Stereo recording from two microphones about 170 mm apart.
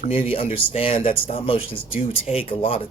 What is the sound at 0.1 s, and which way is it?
Speech, 30° left (ahead or behind).